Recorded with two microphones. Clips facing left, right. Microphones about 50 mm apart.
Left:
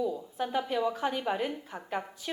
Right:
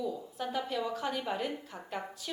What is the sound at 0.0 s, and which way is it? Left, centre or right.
A woman's voice, centre.